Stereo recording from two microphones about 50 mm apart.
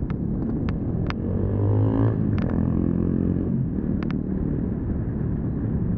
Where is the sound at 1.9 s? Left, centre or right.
Centre.